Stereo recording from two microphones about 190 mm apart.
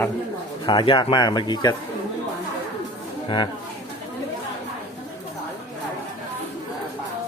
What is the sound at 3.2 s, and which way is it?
Speech, 25° left (ahead or behind).